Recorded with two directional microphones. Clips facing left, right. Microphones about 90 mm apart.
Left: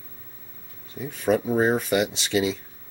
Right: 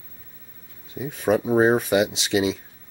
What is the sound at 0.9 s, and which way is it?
Speech, 15° right (ahead or behind).